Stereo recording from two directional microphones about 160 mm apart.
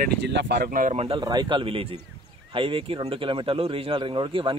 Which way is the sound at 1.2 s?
25° right (ahead or behind).